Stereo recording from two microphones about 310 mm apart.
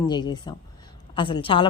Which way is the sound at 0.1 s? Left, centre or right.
Centre.